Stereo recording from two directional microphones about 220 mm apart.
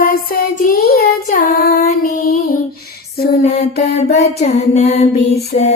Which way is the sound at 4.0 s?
30° left (ahead or behind).